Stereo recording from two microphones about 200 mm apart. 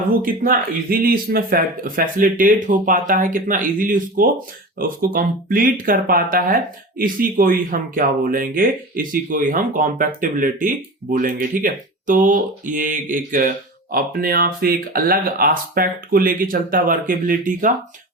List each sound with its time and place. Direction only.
0.2 s speech: 45° right (ahead or behind)